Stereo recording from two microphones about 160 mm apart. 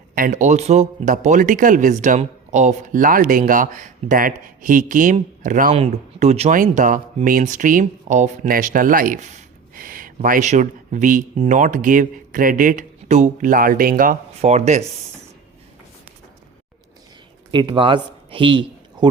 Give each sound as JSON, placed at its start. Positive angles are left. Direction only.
{"t": 0.1, "sound": "a man's voice", "side_deg": -55}
{"t": 5.7, "sound": "speech", "side_deg": -40}
{"t": 6.5, "sound": "speech", "side_deg": -55}
{"t": 9.7, "sound": "a sound", "side_deg": -60}
{"t": 10.2, "sound": "a man's voice", "side_deg": -55}
{"t": 14.5, "sound": "a man's voice", "side_deg": -45}
{"t": 17.5, "sound": "speech", "side_deg": -30}